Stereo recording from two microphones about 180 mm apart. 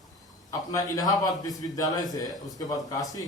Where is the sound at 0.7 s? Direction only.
20° left (ahead or behind).